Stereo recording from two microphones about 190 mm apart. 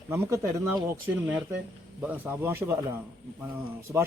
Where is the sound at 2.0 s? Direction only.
10° right (ahead or behind).